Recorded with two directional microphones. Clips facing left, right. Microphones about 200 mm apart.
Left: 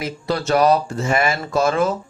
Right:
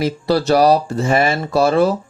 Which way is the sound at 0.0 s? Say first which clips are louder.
Right 6 dB; 35° right (ahead or behind).